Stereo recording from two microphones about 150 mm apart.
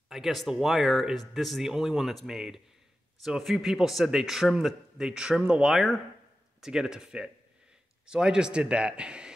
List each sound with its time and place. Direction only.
0.1 s a man's voice: centre (ahead or behind)